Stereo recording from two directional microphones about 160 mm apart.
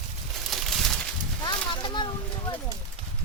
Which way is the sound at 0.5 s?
Centre (ahead or behind).